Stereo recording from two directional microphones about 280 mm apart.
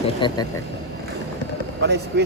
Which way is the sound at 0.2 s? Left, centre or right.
Centre.